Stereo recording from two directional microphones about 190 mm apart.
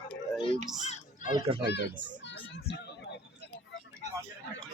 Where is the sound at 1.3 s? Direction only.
25° right (ahead or behind).